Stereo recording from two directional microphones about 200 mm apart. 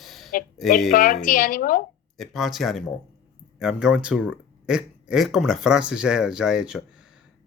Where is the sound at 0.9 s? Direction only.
45° left (ahead or behind).